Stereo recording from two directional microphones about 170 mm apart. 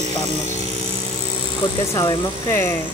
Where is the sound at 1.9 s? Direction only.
15° left (ahead or behind).